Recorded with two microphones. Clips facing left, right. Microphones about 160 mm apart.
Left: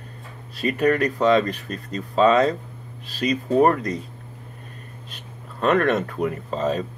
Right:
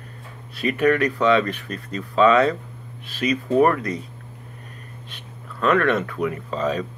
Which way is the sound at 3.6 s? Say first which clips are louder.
Even; 30° left (ahead or behind).